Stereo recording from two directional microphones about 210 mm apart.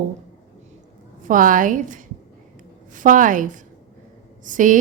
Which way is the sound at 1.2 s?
40° right (ahead or behind).